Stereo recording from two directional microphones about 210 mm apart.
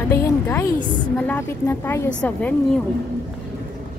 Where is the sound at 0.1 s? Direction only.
10° left (ahead or behind).